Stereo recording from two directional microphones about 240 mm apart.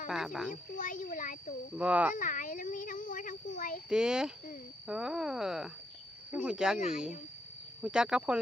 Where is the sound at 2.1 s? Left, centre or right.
Left.